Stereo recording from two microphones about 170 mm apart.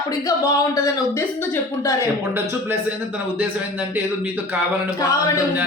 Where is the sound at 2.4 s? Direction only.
15° right (ahead or behind).